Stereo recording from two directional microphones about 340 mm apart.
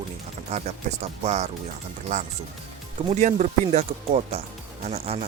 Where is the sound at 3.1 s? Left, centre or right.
Right.